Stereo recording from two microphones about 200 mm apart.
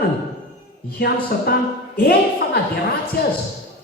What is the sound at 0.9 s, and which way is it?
Speech, 50° left (ahead or behind).